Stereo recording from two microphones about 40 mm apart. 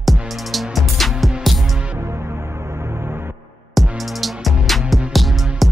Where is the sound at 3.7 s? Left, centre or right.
Centre.